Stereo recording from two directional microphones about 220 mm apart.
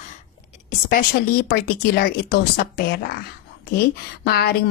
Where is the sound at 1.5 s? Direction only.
45° left (ahead or behind).